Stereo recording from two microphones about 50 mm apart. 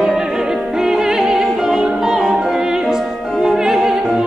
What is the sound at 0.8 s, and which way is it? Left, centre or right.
Opera, centre.